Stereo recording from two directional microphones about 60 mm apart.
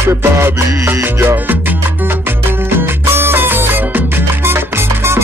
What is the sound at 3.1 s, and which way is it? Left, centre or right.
Music, right.